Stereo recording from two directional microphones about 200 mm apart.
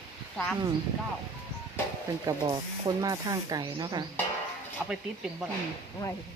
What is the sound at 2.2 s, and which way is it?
Speech, 20° right (ahead or behind).